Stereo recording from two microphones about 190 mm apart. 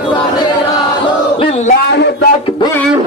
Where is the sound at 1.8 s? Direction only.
60° left (ahead or behind).